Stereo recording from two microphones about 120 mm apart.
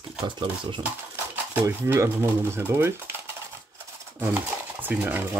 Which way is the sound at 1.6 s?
20° right (ahead or behind).